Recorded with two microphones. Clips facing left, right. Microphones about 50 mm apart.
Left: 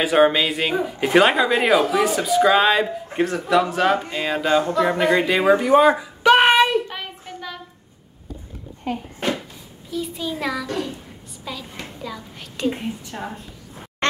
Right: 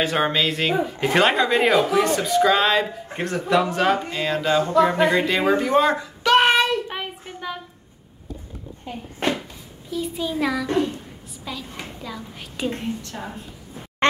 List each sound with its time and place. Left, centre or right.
0.0 s a child's voice: centre
6.9 s child singing: centre
8.9 s speech: left
9.8 s a child's voice: centre
12.7 s speech: centre